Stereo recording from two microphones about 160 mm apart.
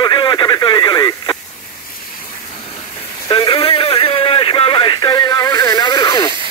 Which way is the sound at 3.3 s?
30° left (ahead or behind).